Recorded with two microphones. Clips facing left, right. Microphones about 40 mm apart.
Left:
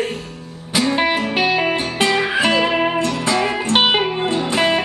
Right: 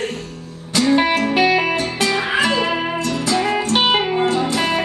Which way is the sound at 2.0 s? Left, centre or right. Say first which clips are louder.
Left 2 dB; left.